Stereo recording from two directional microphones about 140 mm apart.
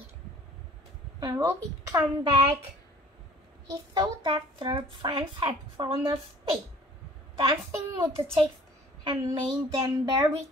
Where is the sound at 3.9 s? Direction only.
30° right (ahead or behind).